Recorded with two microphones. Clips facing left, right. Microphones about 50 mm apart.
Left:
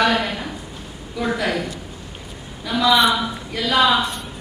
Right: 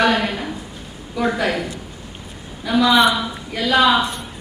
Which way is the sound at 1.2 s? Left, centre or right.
Centre.